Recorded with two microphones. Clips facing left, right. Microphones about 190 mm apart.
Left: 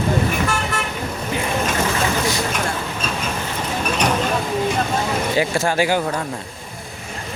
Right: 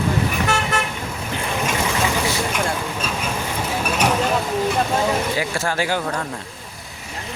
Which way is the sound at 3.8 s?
5° right (ahead or behind).